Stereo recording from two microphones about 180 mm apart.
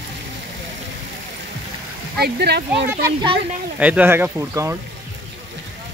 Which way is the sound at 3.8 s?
10° right (ahead or behind).